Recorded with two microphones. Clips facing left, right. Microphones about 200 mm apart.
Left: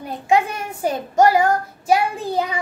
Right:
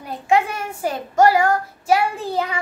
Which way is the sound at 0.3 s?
15° left (ahead or behind).